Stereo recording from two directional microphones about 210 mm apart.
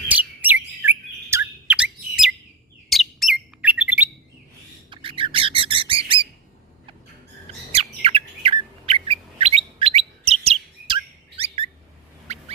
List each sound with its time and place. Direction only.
0.1 s chirp: 10° right (ahead or behind)
2.9 s bird: centre (ahead or behind)
4.9 s bird: 25° right (ahead or behind)
7.7 s bird: 30° right (ahead or behind)
12.3 s a sound: 30° right (ahead or behind)